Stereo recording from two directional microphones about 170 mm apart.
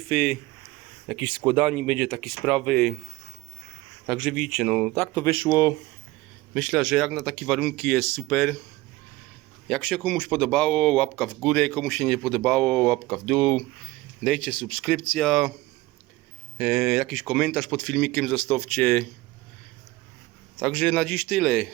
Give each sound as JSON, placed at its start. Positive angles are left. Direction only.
{"t": 0.1, "sound": "speech", "side_deg": 0}
{"t": 4.0, "sound": "speech", "side_deg": 0}
{"t": 5.2, "sound": "speech", "side_deg": 20}
{"t": 6.5, "sound": "speech", "side_deg": 0}
{"t": 9.6, "sound": "speech", "side_deg": 5}
{"t": 16.6, "sound": "speech", "side_deg": -5}
{"t": 20.6, "sound": "speech", "side_deg": 5}